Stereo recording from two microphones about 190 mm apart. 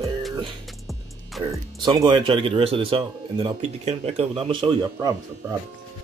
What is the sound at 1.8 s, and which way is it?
Speech, 25° right (ahead or behind).